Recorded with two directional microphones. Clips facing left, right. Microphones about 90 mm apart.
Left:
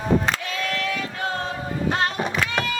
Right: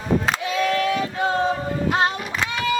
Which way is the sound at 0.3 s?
15° right (ahead or behind).